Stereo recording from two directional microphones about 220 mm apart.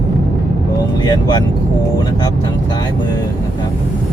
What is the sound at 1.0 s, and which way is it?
Vehicle, 20° left (ahead or behind).